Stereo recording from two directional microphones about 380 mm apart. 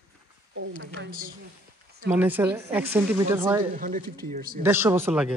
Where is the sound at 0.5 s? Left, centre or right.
Right.